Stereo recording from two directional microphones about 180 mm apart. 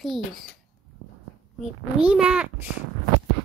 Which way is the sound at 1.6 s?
5° right (ahead or behind).